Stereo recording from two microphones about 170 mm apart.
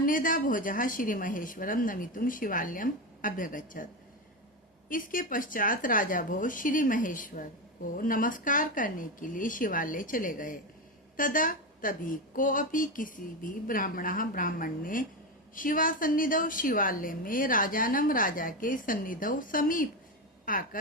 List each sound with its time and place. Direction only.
0.0 s a woman's voice: 55° left (ahead or behind)
4.9 s a woman's voice: 55° left (ahead or behind)